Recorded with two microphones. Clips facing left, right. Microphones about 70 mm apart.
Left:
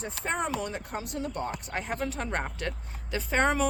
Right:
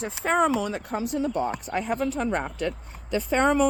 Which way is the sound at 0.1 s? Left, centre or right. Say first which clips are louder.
Right 9 dB; centre.